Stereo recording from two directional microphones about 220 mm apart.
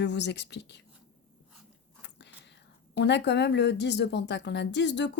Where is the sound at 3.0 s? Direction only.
50° left (ahead or behind).